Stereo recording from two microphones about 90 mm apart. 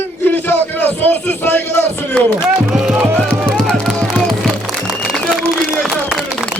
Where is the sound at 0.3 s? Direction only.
20° left (ahead or behind).